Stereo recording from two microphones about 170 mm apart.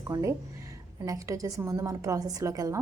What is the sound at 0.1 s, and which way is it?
A woman's voice, 20° right (ahead or behind).